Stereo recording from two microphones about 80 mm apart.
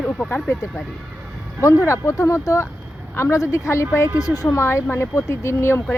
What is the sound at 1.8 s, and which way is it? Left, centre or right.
A woman's voice, left.